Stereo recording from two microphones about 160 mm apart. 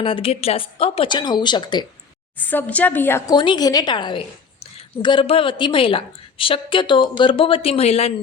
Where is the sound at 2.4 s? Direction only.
10° left (ahead or behind).